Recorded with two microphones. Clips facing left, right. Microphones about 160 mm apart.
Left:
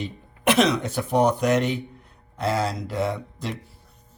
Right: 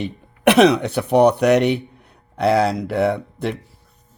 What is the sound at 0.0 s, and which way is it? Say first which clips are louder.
Speech: right 7 dB; 65° right (ahead or behind).